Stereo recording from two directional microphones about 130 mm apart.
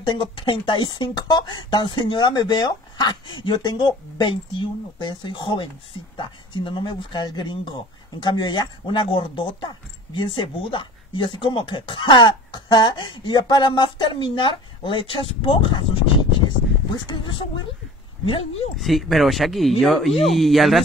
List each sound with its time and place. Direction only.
0.0 s speech: 40° left (ahead or behind)
18.2 s speech: 50° left (ahead or behind)
18.8 s speech: centre (ahead or behind)